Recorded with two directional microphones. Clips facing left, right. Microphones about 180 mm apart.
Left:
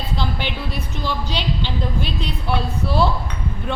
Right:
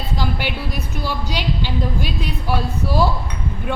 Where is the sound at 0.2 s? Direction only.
10° right (ahead or behind).